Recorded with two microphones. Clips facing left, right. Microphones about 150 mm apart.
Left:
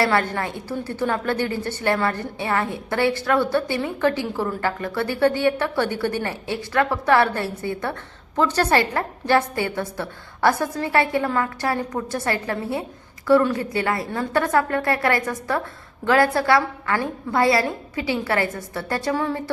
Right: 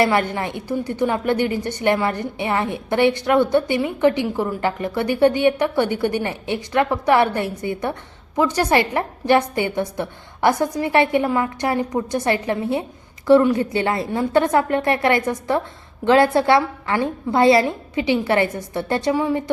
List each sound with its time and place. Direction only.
0.0 s a woman's voice: 20° right (ahead or behind)